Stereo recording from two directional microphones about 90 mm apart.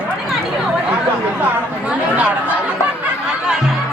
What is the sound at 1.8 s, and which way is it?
Speech, 20° right (ahead or behind).